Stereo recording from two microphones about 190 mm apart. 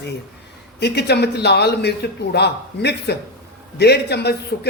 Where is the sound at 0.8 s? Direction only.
60° left (ahead or behind).